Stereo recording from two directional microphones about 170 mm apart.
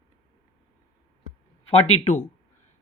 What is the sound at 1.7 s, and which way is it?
Speech, 40° left (ahead or behind).